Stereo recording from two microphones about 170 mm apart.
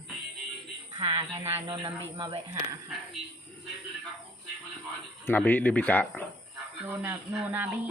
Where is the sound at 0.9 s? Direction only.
25° right (ahead or behind).